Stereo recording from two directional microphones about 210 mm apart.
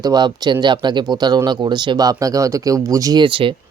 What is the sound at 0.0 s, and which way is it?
Speech, 20° right (ahead or behind).